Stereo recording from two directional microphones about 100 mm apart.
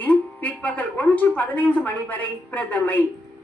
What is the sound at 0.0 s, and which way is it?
Speech, 15° left (ahead or behind).